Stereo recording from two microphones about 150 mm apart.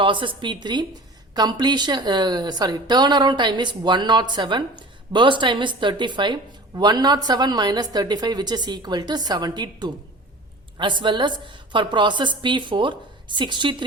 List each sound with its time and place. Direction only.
0.0 s a woman's voice: 35° right (ahead or behind)